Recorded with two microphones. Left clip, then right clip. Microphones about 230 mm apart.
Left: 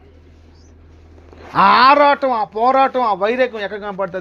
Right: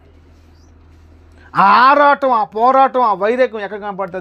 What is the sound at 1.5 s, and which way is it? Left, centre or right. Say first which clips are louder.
Speech: right 1 dB; right.